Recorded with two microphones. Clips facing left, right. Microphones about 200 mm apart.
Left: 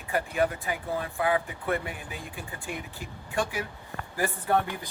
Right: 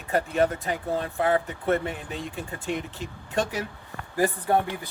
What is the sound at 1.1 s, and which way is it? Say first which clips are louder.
Speech: right 3 dB; 40° right (ahead or behind).